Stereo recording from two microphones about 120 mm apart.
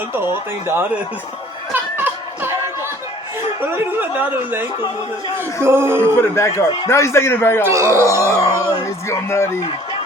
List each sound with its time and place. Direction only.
0.1 s speech: 20° right (ahead or behind)
1.7 s music: 15° right (ahead or behind)
3.6 s a man's voice: 15° right (ahead or behind)
5.6 s speech: 20° right (ahead or behind)
6.3 s a man's voice: 25° left (ahead or behind)
7.6 s speech: 25° right (ahead or behind)
9.0 s a man's voice: 25° left (ahead or behind)